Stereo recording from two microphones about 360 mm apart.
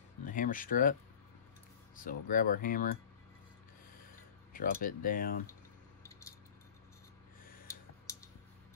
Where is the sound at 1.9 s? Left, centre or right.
Left.